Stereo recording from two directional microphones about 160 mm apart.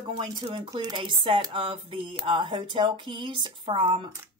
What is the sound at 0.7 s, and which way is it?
Speech, 25° right (ahead or behind).